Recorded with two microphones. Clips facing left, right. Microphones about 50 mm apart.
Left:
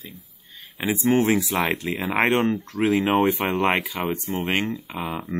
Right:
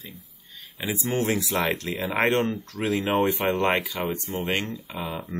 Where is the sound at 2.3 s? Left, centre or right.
Left; by 4.2 s centre.